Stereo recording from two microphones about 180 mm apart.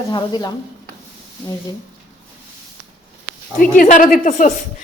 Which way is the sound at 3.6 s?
50° left (ahead or behind).